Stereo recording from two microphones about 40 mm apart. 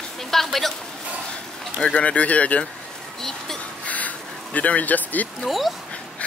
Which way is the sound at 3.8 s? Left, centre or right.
Left.